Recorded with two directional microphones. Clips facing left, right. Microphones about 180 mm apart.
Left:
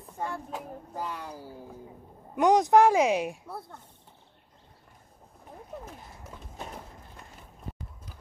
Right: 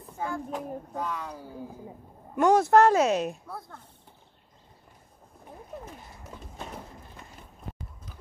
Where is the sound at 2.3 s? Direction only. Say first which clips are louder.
Right 1 dB; 15° left (ahead or behind).